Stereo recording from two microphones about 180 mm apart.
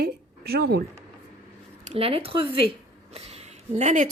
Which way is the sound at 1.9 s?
30° right (ahead or behind).